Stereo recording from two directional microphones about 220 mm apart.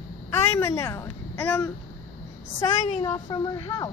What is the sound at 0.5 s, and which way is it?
A woman's voice, 15° left (ahead or behind).